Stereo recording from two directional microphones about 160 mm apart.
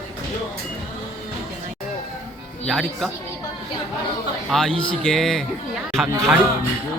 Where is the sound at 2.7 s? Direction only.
Centre (ahead or behind).